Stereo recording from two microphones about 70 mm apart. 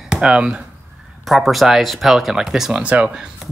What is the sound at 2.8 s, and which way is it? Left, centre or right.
Speech, centre.